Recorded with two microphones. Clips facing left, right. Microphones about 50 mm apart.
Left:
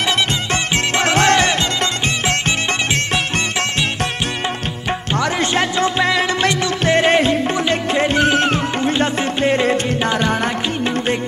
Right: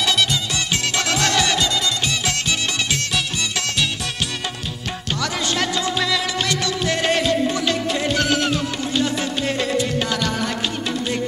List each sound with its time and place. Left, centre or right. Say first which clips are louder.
1.0 s music: left 7 dB; left
5.4 s music: left 4 dB; left